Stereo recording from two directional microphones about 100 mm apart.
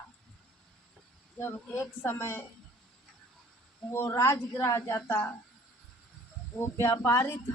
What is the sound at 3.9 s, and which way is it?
A woman's voice, 25° left (ahead or behind).